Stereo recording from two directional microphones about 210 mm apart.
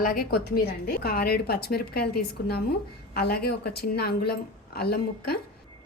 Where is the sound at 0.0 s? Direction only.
40° left (ahead or behind).